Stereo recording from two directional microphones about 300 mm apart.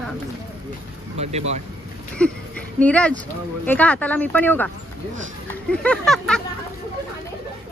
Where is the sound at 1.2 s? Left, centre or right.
Right.